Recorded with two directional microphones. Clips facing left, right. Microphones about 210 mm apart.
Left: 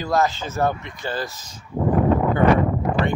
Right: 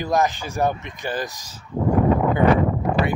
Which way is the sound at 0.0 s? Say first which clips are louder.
Even; 15° right (ahead or behind).